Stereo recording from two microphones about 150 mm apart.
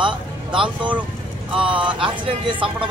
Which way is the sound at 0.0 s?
35° right (ahead or behind).